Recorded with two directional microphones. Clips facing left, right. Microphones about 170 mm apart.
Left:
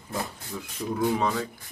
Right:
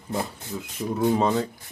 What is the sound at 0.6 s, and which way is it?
Speech, 20° right (ahead or behind).